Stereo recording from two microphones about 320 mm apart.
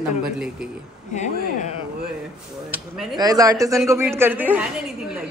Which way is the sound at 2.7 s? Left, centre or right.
Centre.